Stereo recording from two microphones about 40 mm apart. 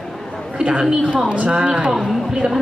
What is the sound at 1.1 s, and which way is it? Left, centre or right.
Speech, right.